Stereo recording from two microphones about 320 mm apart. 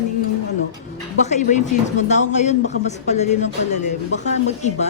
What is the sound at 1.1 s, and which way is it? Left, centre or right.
A woman's voice, left.